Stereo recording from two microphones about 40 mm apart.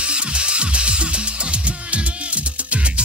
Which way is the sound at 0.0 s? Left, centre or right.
Right.